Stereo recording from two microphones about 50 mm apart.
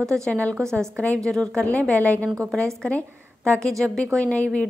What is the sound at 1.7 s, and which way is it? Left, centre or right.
Speech, left.